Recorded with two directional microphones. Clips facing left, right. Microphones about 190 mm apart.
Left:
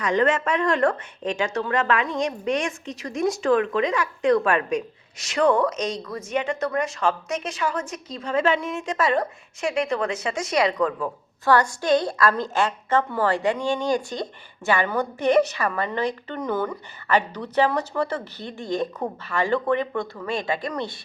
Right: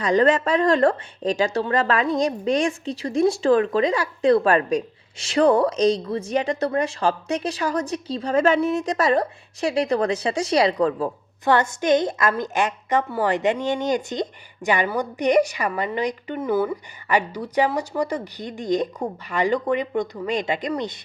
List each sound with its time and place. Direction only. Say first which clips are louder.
0.0 s a woman's voice: right 3 dB; 35° right (ahead or behind)
11.4 s a woman's voice: right 1 dB; 20° right (ahead or behind)